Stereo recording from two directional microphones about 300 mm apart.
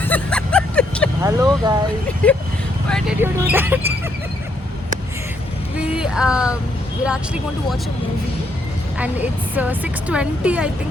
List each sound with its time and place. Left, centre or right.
0.0 s vehicle: centre
1.2 s a sound: centre
2.2 s a woman's voice: centre
5.9 s speech: centre
9.0 s a woman's voice: centre